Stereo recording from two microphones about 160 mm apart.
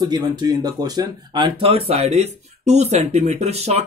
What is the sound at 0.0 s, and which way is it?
Speech, 25° right (ahead or behind).